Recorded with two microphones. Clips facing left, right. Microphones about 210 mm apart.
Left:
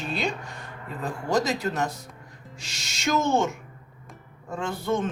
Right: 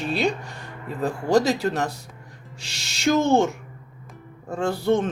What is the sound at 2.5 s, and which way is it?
Music, 65° right (ahead or behind).